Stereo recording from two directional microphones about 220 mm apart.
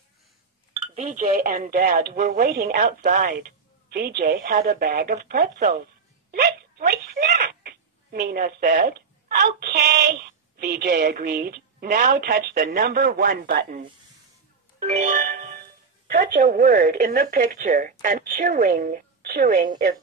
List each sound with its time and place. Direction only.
0.9 s speech: 30° right (ahead or behind)
6.3 s a sound: 45° right (ahead or behind)
9.4 s a woman's voice: 45° right (ahead or behind)
14.8 s music: 35° right (ahead or behind)
16.1 s speech: 40° right (ahead or behind)